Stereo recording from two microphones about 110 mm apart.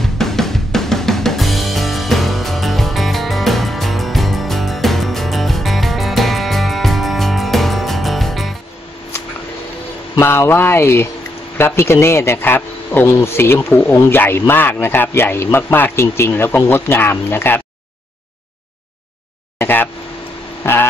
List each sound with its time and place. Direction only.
0.0 s drum kit: 5° left (ahead or behind)
10.1 s a man's voice: 25° left (ahead or behind)
19.6 s a man's voice: 20° left (ahead or behind)